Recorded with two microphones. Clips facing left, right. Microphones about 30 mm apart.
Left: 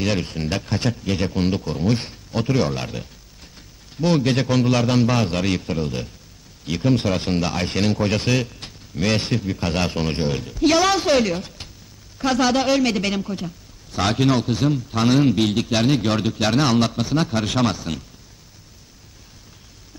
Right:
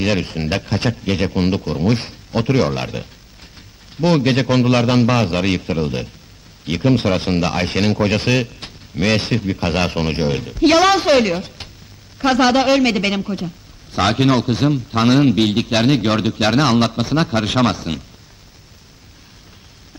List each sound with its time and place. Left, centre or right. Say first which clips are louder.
0.0 s speech: right 4 dB; centre